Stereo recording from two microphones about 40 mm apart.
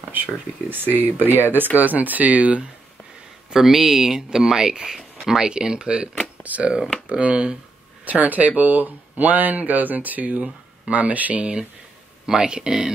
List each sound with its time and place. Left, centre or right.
0.1 s speech: right
3.5 s speech: centre; by 6.0 s right
6.4 s speech: right
7.1 s speech: right
8.0 s speech: right
12.3 s speech: centre